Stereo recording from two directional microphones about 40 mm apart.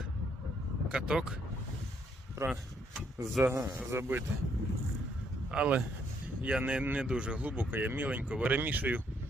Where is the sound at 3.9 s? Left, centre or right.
Right.